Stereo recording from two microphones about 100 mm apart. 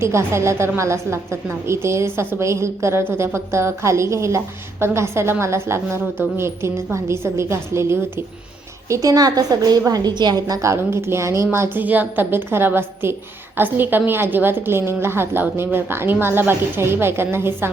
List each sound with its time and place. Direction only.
0.0 s a woman's voice: 25° right (ahead or behind)